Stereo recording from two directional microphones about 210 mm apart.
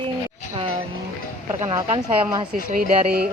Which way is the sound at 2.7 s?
45° right (ahead or behind).